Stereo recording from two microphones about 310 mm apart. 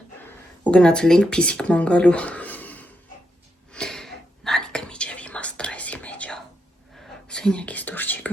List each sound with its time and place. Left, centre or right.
0.6 s speech: centre
3.7 s whispering: centre